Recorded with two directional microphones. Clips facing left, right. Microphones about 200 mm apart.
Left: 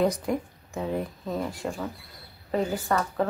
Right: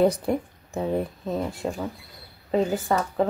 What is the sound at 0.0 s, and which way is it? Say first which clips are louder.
Speech: right 4 dB; 30° right (ahead or behind).